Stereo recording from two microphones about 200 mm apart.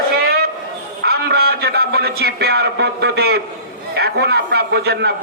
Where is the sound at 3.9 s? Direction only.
55° right (ahead or behind).